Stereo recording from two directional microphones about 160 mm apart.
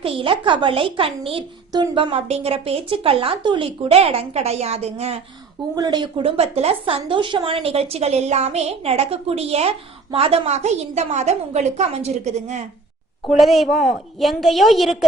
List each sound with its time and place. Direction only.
0.0 s a woman's voice: 35° right (ahead or behind)
5.7 s a woman's voice: 25° right (ahead or behind); by 12.6 s 45° right (ahead or behind)
13.2 s a woman's voice: centre (ahead or behind)